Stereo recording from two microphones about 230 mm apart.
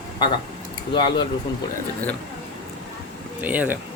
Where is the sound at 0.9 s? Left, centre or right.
Left.